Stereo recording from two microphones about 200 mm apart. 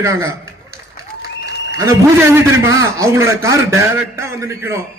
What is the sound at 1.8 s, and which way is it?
A man's voice, 15° right (ahead or behind).